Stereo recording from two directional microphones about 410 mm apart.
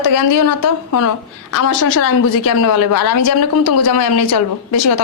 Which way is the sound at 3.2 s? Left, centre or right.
Left.